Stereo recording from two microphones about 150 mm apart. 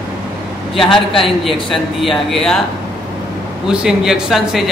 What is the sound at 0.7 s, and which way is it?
A man's voice, centre (ahead or behind).